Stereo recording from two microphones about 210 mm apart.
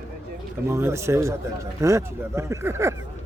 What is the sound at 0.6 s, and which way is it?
A man's voice, 15° right (ahead or behind).